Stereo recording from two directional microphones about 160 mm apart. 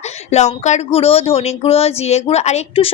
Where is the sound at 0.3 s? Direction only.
45° left (ahead or behind).